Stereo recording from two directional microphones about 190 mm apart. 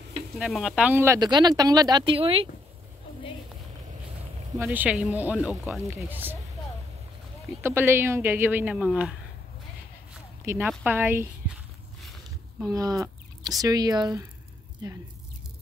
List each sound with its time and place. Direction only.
0.4 s speech: 5° right (ahead or behind); by 2.5 s 30° right (ahead or behind)
4.6 s a woman's voice: 10° right (ahead or behind)
7.6 s a woman's voice: 10° right (ahead or behind)
10.4 s a woman's voice: 15° right (ahead or behind)
12.7 s speech: 15° right (ahead or behind)